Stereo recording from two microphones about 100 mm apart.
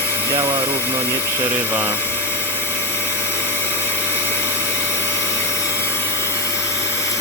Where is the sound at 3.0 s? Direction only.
25° left (ahead or behind).